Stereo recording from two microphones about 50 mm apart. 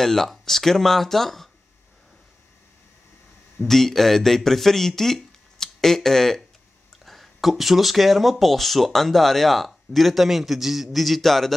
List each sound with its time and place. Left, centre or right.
0.0 s speech: centre
3.6 s speech: centre